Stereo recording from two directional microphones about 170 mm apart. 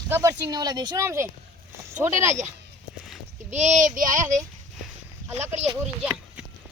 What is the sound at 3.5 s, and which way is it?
Speech, 45° right (ahead or behind).